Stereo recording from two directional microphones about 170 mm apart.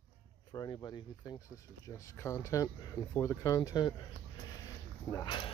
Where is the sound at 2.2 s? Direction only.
20° left (ahead or behind).